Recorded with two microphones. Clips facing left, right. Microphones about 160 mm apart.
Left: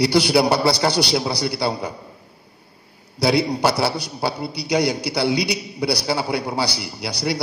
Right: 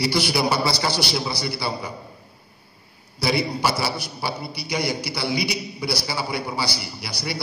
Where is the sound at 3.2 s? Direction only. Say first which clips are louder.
Left 5 dB; 65° left (ahead or behind).